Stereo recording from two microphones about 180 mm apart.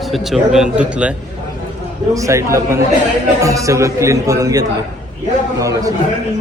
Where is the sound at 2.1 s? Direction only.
15° right (ahead or behind).